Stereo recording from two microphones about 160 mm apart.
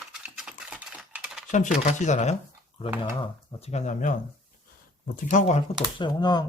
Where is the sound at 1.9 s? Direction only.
50° left (ahead or behind).